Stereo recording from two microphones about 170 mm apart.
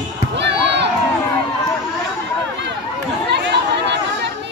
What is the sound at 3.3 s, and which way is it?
Chatter, 90° right.